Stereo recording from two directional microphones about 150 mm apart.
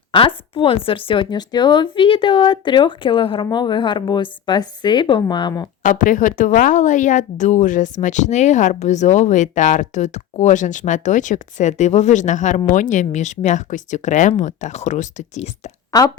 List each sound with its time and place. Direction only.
0.1 s a woman's voice: 35° left (ahead or behind)
5.8 s a woman's voice: 60° left (ahead or behind)
15.9 s speech: 25° left (ahead or behind)